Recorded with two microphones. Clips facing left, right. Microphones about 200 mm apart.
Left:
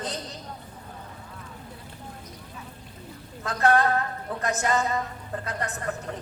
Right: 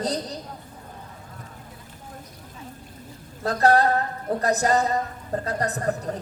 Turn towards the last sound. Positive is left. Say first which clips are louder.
# right 6 dB
turn(degrees=-35)  # may be behind; listen again after turning